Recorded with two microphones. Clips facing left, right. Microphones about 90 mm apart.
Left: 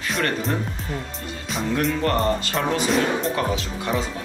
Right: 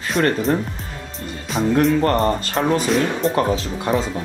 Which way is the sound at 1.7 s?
40° right (ahead or behind).